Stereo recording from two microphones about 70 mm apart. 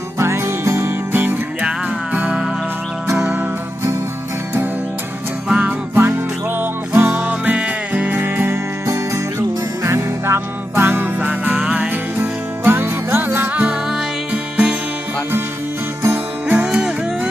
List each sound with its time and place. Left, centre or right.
0.2 s music: right
3.1 s music: centre
5.5 s music: centre
5.9 s music: right
9.8 s music: right
11.6 s music: centre
11.9 s music: right
16.5 s music: centre